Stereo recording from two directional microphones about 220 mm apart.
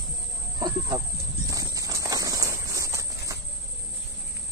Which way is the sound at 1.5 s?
15° right (ahead or behind).